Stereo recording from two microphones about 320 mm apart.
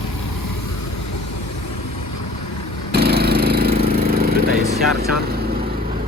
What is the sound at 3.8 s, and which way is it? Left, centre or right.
Vehicle, right.